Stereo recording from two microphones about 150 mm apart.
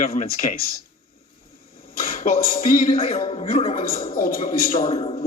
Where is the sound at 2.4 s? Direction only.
40° left (ahead or behind).